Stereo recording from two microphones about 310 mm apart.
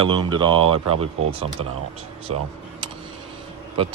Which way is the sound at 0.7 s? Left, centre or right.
Right.